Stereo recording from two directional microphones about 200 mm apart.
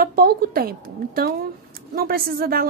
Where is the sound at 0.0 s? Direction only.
50° right (ahead or behind).